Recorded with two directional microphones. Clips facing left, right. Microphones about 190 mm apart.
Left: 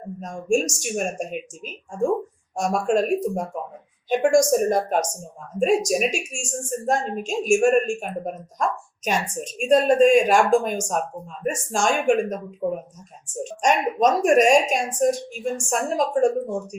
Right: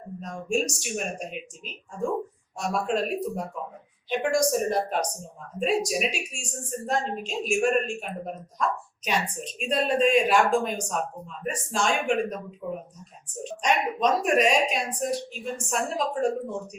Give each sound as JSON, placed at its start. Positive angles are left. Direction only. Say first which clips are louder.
{"t": 0.2, "sound": "a woman's voice", "louder": "left 5 dB", "side_deg": 45}